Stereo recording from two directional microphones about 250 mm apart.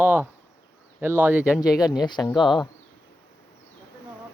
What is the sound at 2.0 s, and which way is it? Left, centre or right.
Speech, centre.